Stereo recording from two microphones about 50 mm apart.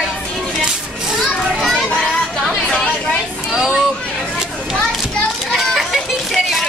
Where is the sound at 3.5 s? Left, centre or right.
Centre.